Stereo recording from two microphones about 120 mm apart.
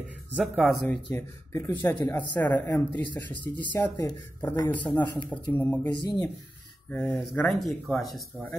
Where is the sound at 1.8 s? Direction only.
20° left (ahead or behind).